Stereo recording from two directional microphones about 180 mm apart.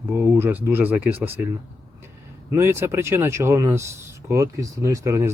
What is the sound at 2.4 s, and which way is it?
Speech, 15° right (ahead or behind).